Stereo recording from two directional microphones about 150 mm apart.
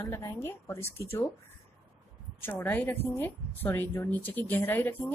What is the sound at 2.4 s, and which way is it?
Speech, 10° left (ahead or behind).